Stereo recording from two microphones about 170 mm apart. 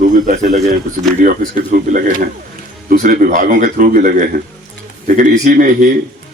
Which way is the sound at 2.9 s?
55° right (ahead or behind).